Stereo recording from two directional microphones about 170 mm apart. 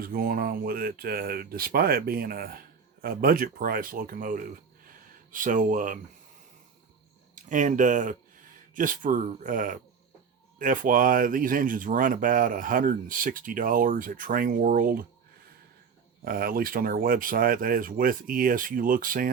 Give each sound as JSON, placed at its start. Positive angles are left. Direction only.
{"t": 0.0, "sound": "speech", "side_deg": -60}
{"t": 7.3, "sound": "speech", "side_deg": -50}
{"t": 16.2, "sound": "speech", "side_deg": -60}